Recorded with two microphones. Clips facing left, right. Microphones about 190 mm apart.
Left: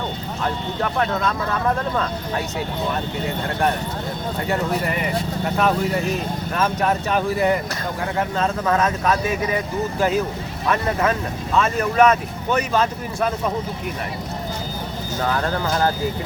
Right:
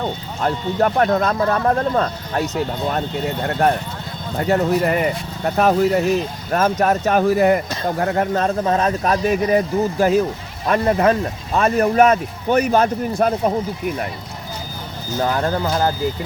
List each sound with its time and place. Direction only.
0.4 s speech: 45° right (ahead or behind)
4.4 s speech: 45° right (ahead or behind)
8.6 s speech: 30° right (ahead or behind); by 12.9 s 50° right (ahead or behind)
13.1 s speech: 40° right (ahead or behind)
15.2 s speech: 35° right (ahead or behind)